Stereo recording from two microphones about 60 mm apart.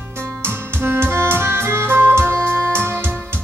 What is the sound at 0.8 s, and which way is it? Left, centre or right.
Music, right.